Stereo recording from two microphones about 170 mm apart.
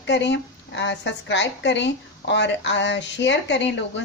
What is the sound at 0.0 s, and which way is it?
A woman's voice, 90° left.